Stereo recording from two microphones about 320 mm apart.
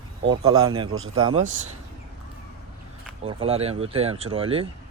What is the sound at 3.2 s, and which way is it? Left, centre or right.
Speech, centre.